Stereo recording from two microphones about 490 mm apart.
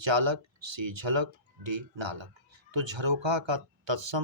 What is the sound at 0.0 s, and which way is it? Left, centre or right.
Speech, right.